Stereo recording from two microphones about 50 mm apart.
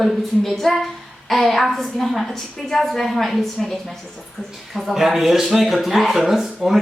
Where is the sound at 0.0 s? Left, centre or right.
Centre.